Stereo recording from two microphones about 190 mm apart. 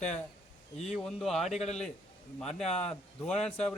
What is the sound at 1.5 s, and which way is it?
Speech, 35° left (ahead or behind).